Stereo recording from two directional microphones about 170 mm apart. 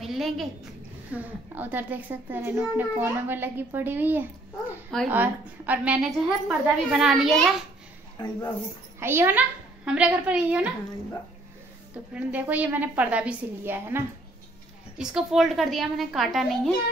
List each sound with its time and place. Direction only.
0.0 s a sound: centre (ahead or behind)
1.1 s a child's voice: 10° right (ahead or behind)
8.2 s speech: 25° left (ahead or behind)
9.0 s a child's voice: 15° right (ahead or behind)
11.9 s a child's voice: 10° right (ahead or behind)
15.0 s a woman's voice: 5° right (ahead or behind)